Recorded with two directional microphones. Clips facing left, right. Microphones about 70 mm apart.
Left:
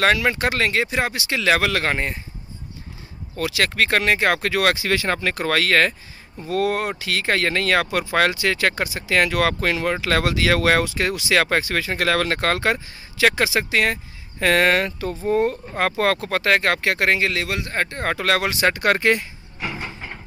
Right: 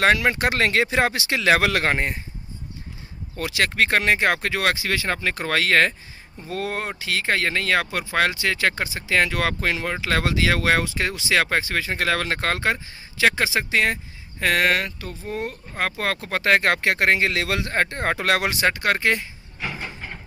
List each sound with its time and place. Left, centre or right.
0.0 s speech: right
3.3 s speech: right; by 5.5 s centre
5.5 s speech: centre
14.4 s speech: centre
16.2 s speech: centre
16.4 s speech: right
17.4 s speech: right; by 18.6 s centre
18.6 s speech: centre